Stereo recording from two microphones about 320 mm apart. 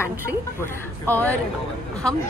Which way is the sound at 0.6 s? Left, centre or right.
Centre.